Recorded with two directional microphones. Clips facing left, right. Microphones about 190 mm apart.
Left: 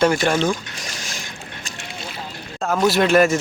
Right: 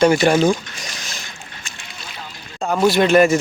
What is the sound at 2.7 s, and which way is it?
Speech, centre (ahead or behind).